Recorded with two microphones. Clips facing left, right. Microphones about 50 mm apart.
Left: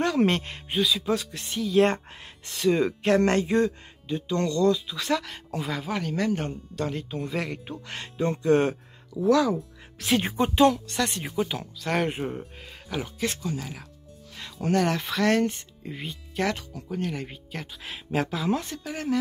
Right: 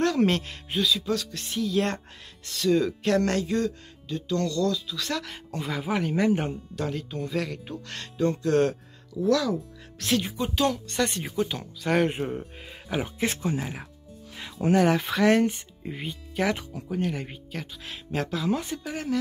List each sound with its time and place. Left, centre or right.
0.0 s speech: centre
1.0 s speech: centre
1.3 s speech: centre
2.4 s speech: left
5.2 s speech: centre
6.5 s speech: centre
6.9 s speech: centre
10.2 s a woman's voice: left
10.7 s speech: centre
12.9 s speech: right
14.3 s speech: centre